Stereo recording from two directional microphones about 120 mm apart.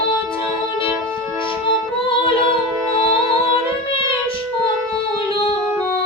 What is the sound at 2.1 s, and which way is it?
Music, 50° left (ahead or behind).